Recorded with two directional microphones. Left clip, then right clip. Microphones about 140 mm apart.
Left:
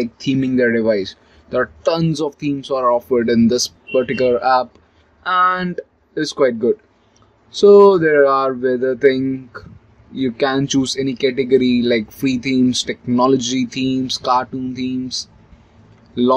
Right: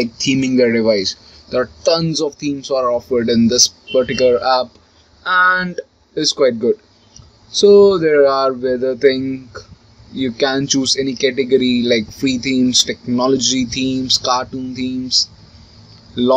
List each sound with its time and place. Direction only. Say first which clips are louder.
0.0 s speech: right 3 dB; 5° left (ahead or behind)
1.8 s speech: right 3 dB; 20° left (ahead or behind)